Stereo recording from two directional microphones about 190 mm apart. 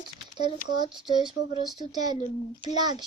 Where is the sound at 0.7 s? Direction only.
25° right (ahead or behind).